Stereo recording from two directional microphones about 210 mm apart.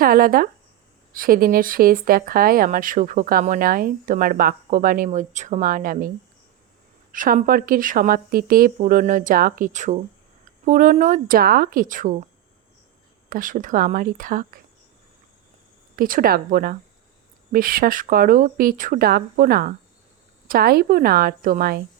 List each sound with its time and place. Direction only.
0.0 s speech: 45° right (ahead or behind)
7.1 s speech: 40° right (ahead or behind)
13.3 s speech: 40° right (ahead or behind)
16.0 s speech: 40° right (ahead or behind)